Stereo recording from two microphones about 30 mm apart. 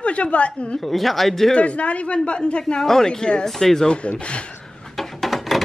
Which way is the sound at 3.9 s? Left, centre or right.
Left.